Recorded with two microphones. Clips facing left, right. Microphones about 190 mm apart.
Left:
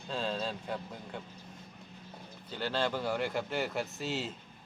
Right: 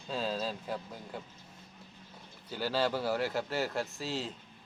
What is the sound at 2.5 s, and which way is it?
Speech, 10° right (ahead or behind).